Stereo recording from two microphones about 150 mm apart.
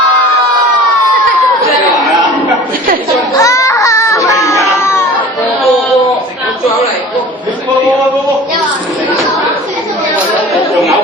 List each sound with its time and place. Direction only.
3.3 s baby cry: 20° left (ahead or behind)